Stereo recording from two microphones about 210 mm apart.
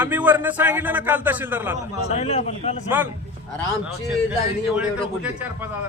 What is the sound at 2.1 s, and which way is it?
Speech, 30° left (ahead or behind).